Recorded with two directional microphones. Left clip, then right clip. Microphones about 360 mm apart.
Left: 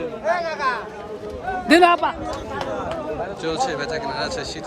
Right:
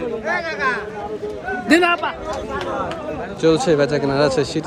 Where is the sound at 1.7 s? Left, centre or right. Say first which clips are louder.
Left 2 dB; left.